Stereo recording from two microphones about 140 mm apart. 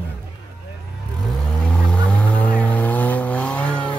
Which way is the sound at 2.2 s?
10° left (ahead or behind).